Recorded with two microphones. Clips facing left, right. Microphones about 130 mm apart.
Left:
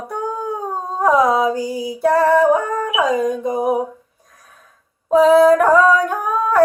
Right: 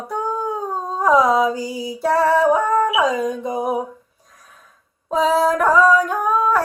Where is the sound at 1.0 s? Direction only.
55° left (ahead or behind).